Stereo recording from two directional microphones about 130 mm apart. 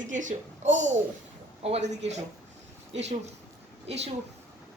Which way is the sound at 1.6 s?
55° right (ahead or behind).